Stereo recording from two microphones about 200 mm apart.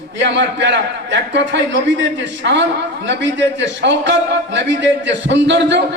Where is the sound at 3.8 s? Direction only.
60° right (ahead or behind).